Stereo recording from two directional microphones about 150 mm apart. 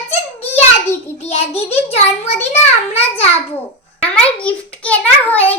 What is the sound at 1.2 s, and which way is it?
A child's voice, 45° left (ahead or behind).